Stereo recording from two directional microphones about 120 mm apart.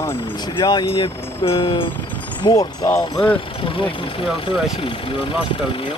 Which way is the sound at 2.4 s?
30° left (ahead or behind).